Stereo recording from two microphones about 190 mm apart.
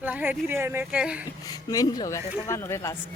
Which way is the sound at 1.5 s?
20° left (ahead or behind).